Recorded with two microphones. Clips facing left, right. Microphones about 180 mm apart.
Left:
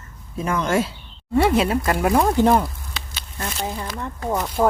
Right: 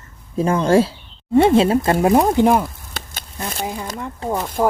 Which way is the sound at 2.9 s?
50° right (ahead or behind).